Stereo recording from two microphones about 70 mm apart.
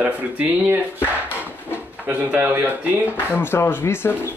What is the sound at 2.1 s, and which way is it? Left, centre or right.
Speech, centre.